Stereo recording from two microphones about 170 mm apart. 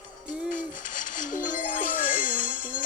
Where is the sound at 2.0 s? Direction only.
55° left (ahead or behind).